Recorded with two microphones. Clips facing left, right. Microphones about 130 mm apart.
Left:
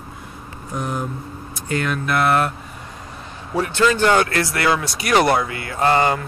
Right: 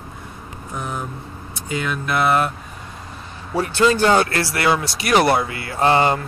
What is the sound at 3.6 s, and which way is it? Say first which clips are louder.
Speech: right 1 dB; 30° right (ahead or behind).